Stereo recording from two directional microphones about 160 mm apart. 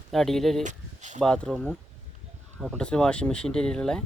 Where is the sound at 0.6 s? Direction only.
50° right (ahead or behind).